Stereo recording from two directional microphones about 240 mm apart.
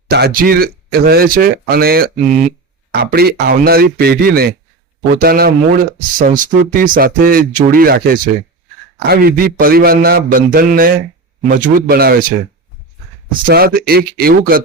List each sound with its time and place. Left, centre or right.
0.1 s speech: right
13.4 s speech: right